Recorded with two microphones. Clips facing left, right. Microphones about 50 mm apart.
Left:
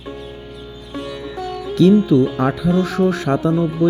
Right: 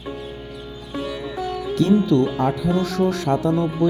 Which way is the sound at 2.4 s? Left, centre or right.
Left.